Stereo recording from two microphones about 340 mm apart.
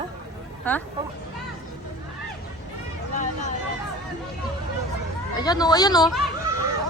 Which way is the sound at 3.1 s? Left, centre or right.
Left.